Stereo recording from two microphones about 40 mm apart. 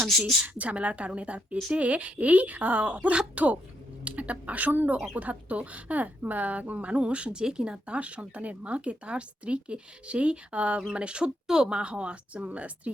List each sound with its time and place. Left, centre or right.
0.0 s a woman's voice: centre
0.4 s speech: right